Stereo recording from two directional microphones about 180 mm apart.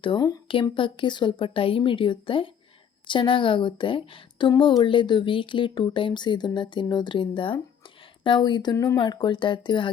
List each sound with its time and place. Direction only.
0.0 s speech: 25° left (ahead or behind)